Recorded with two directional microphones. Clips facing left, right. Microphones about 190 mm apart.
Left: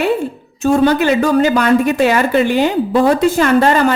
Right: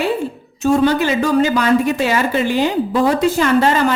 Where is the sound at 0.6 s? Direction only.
60° left (ahead or behind).